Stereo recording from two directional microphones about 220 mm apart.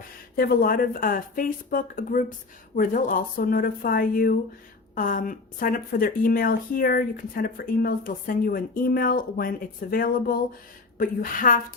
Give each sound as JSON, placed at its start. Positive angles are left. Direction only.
{"t": 0.3, "sound": "a woman's voice", "side_deg": 45}